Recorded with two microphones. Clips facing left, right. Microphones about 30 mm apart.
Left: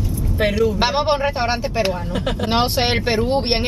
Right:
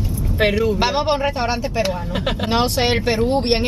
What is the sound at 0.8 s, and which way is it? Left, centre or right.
Speech, centre.